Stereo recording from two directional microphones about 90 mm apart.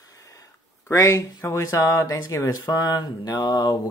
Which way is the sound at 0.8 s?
35° left (ahead or behind).